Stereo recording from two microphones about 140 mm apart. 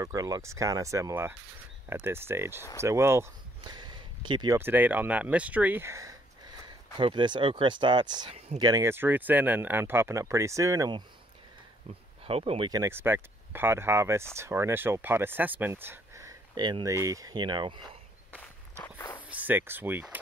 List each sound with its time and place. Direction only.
0.0 s speech: 25° right (ahead or behind)
3.6 s a sound: 30° right (ahead or behind)
4.6 s speech: 15° right (ahead or behind)
7.0 s speech: 35° right (ahead or behind)
12.3 s speech: 45° right (ahead or behind)
12.6 s speech: 25° right (ahead or behind)
12.9 s speech: 15° right (ahead or behind); by 17.8 s 35° right (ahead or behind)
18.8 s walk: 15° left (ahead or behind)
19.2 s speech: 10° right (ahead or behind)